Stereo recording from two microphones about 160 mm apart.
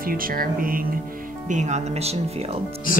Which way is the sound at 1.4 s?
50° right (ahead or behind).